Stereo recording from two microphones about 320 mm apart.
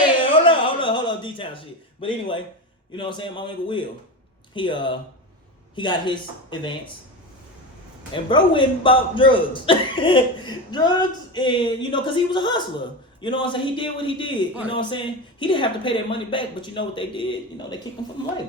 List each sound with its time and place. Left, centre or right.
0.0 s a sound: centre
2.9 s speech: centre
8.1 s speech: centre